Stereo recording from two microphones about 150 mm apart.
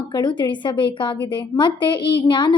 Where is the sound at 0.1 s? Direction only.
30° left (ahead or behind).